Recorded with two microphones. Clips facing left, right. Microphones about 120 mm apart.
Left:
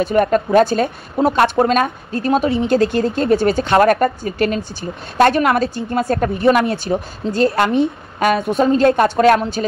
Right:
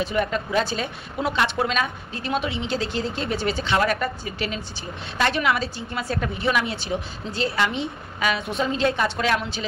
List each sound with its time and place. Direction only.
0.0 s a woman's voice: 50° left (ahead or behind)